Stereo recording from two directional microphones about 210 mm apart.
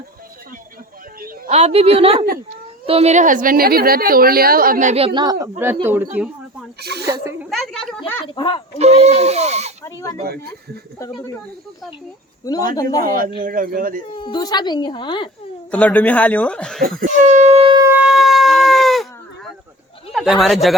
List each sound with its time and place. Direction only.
1.2 s a woman's voice: 35° right (ahead or behind); by 6.1 s 10° right (ahead or behind)
6.1 s a sound: 5° right (ahead or behind)
7.0 s speech: 15° right (ahead or behind)
7.5 s speech: centre (ahead or behind)
8.4 s a woman's voice: 20° left (ahead or behind)
8.8 s a woman's voice: 30° right (ahead or behind)
9.8 s speech: 15° left (ahead or behind)
12.7 s speech: 15° left (ahead or behind)
13.0 s a woman's voice: 40° right (ahead or behind)
14.2 s a woman's voice: 20° left (ahead or behind)
15.7 s speech: 5° left (ahead or behind)
17.0 s a woman's voice: 35° right (ahead or behind)
17.8 s shofar: 5° right (ahead or behind)
20.1 s speech: centre (ahead or behind)